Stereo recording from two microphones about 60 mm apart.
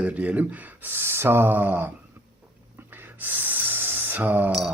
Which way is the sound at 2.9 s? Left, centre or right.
Right.